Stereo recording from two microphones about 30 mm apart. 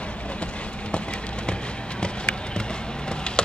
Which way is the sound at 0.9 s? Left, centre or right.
Left.